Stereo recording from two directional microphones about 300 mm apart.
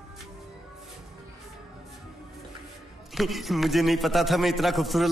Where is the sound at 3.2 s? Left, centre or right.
Centre.